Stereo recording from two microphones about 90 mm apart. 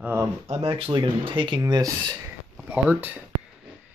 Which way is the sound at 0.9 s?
60° right (ahead or behind).